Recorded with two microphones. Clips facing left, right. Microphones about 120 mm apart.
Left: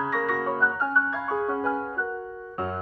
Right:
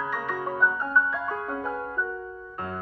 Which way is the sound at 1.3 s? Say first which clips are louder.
Left 5 dB; 10° left (ahead or behind).